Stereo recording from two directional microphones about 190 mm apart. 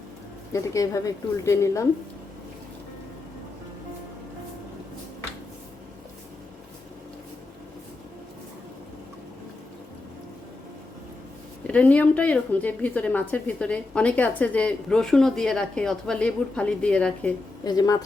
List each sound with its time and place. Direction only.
0.5 s a woman's voice: 15° left (ahead or behind)
11.7 s a woman's voice: 5° left (ahead or behind)
17.6 s speech: 20° left (ahead or behind)